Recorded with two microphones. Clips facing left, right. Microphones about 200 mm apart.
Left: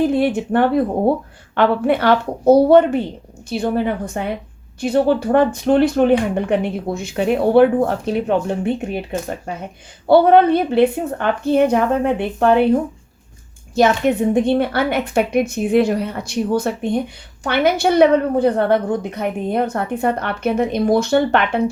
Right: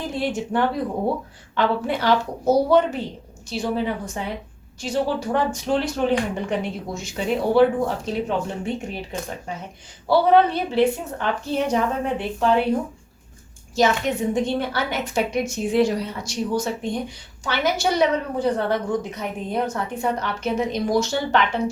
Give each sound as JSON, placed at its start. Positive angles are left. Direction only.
{"t": 0.0, "sound": "speech", "side_deg": 60}
{"t": 13.7, "sound": "speech", "side_deg": 55}